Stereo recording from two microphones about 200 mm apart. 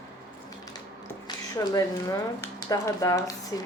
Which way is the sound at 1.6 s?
15° left (ahead or behind).